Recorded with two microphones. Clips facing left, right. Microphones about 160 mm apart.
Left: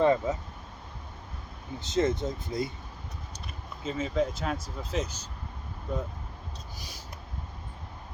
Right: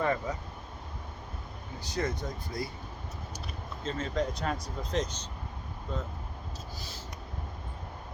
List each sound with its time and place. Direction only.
0.0 s speech: 20° left (ahead or behind)
1.8 s speech: 20° left (ahead or behind)
3.8 s speech: 5° left (ahead or behind)
6.7 s a sound: 15° left (ahead or behind)